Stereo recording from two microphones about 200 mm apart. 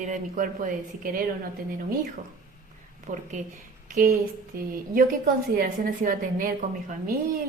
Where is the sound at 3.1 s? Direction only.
40° right (ahead or behind).